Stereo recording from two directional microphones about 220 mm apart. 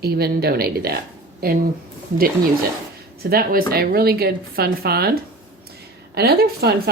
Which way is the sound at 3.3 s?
45° right (ahead or behind).